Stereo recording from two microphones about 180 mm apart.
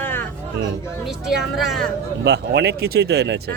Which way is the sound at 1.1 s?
5° right (ahead or behind).